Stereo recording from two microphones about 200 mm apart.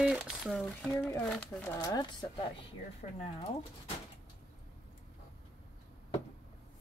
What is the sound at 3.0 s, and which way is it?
Speech, 35° left (ahead or behind).